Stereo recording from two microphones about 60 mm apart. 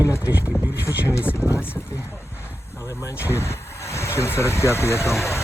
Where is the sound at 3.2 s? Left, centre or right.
Left.